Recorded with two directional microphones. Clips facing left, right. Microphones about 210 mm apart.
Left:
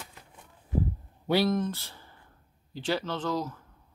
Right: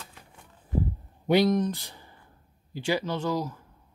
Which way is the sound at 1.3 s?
15° right (ahead or behind).